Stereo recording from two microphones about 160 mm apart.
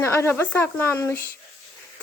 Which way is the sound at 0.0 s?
15° left (ahead or behind).